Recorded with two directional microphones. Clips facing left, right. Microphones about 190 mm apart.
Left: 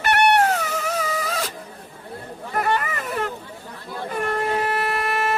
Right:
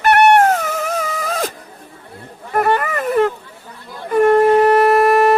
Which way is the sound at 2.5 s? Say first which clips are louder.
Right 7 dB; 50° right (ahead or behind).